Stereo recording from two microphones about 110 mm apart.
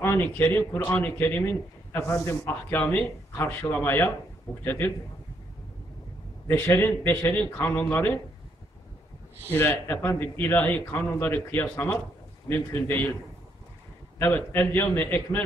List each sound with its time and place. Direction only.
0.0 s a man's voice: 25° left (ahead or behind)
2.8 s a man's voice: 10° left (ahead or behind)
6.4 s a man's voice: 20° left (ahead or behind)
9.5 s a man's voice: 20° left (ahead or behind)
14.1 s a man's voice: 20° left (ahead or behind)